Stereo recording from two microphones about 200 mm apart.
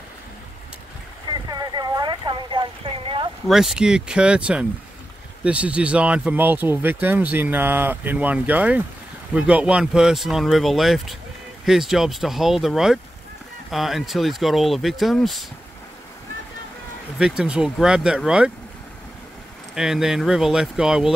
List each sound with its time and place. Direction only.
1.3 s a sound: 20° right (ahead or behind)
3.4 s speech: centre (ahead or behind)
17.2 s speech: 5° right (ahead or behind)
19.7 s speech: centre (ahead or behind)